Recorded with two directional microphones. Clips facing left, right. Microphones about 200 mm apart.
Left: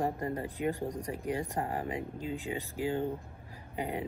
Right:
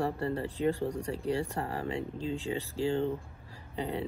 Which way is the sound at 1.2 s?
35° right (ahead or behind).